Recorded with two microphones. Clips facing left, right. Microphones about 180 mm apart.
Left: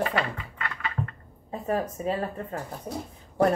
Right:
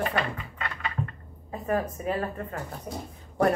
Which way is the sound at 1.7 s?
25° left (ahead or behind).